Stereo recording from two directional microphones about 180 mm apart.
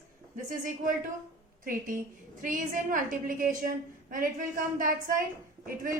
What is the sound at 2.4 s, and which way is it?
A woman's voice, 45° right (ahead or behind).